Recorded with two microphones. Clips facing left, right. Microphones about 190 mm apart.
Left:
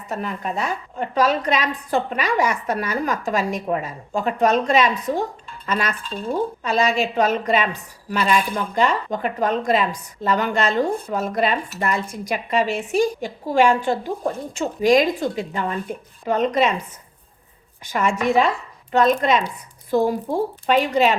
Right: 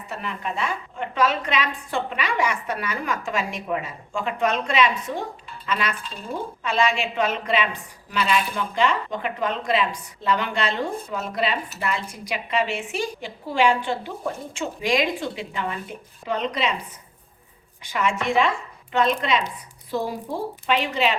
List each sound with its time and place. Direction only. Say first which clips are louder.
0.1 s a woman's voice: left 4 dB; 40° left (ahead or behind)
17.8 s a woman's voice: left 4 dB; 45° left (ahead or behind)